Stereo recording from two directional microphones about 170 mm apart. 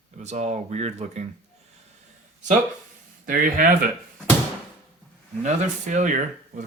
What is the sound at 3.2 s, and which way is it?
Speech, 55° right (ahead or behind).